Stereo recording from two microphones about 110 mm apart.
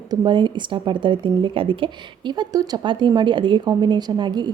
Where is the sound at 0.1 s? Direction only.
45° right (ahead or behind).